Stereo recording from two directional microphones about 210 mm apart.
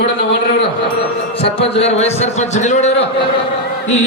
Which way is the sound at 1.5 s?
30° left (ahead or behind).